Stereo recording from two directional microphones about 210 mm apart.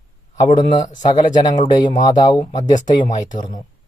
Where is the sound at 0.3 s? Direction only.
20° left (ahead or behind).